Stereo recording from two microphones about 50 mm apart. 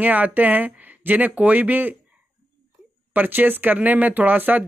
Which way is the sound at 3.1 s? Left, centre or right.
Right.